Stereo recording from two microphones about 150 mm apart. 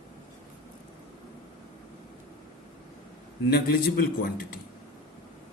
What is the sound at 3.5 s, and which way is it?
A man's voice, 90° left.